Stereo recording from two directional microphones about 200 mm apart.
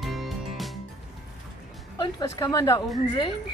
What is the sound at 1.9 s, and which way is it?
Speech, 20° left (ahead or behind).